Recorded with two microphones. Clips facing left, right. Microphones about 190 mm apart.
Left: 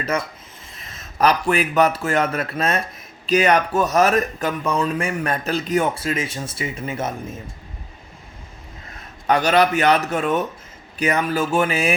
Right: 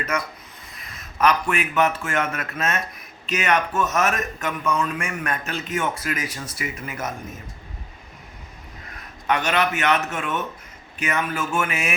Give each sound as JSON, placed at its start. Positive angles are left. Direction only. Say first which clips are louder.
{"t": 0.0, "sound": "speech", "louder": "left 3 dB", "side_deg": 30}
{"t": 9.2, "sound": "speech", "louder": "left 5 dB", "side_deg": 35}